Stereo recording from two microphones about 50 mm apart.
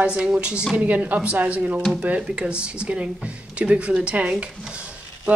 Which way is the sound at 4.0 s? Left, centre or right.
Right.